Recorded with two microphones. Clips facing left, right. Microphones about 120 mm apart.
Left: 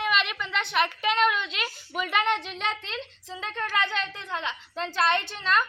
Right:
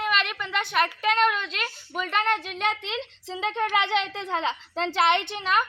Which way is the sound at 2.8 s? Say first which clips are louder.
Right 4 dB; 20° right (ahead or behind).